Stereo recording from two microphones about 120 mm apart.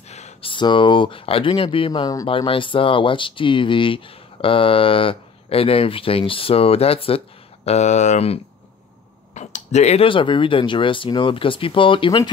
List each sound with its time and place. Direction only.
0.4 s speech: 45° left (ahead or behind)
1.9 s speech: 35° left (ahead or behind)
2.2 s speech: 50° left (ahead or behind)